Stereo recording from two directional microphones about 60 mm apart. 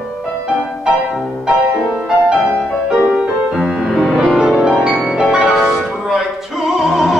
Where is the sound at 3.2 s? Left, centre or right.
Centre.